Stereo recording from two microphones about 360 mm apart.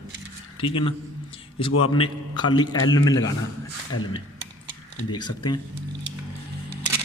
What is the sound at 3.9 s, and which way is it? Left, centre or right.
Speech, left.